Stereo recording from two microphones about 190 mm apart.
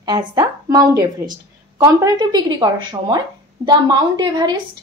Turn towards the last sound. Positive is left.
turn(degrees=-20)  # may be behind; listen again after turning